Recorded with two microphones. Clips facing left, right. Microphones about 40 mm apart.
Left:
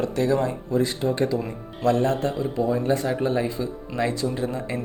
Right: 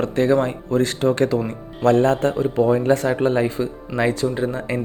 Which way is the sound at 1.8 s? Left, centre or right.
Right.